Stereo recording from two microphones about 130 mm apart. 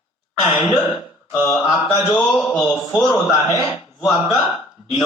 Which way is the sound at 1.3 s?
25° left (ahead or behind).